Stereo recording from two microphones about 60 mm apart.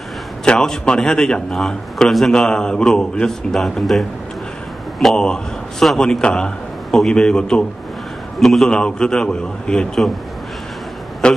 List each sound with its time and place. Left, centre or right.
0.5 s a man's voice: centre
5.0 s a man's voice: centre
8.4 s a man's voice: centre
8.6 s a man's voice: centre
11.2 s a man's voice: centre